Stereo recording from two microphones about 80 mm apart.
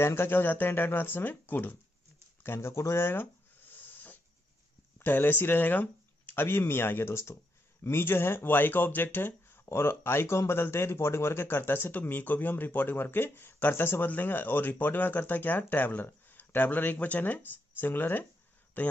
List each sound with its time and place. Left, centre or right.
0.0 s speech: left
2.4 s a sound: left
4.9 s speech: left